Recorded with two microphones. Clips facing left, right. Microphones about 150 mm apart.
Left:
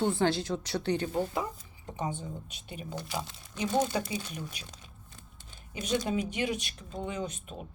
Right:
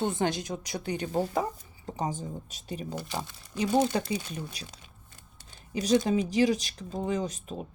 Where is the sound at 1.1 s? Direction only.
40° right (ahead or behind).